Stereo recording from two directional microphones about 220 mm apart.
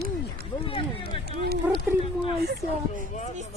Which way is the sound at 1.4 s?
45° right (ahead or behind).